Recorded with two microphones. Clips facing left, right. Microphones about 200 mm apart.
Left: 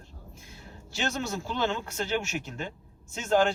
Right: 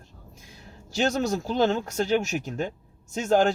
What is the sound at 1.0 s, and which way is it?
A man's voice, 40° right (ahead or behind).